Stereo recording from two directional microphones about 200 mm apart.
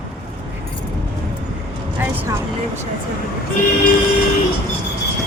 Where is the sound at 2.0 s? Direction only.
10° right (ahead or behind).